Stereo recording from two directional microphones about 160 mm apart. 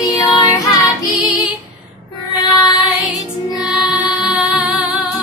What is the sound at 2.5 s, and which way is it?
Child singing, 25° left (ahead or behind).